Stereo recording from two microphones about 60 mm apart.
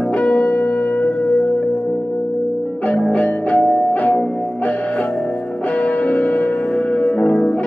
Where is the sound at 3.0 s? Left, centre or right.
Left.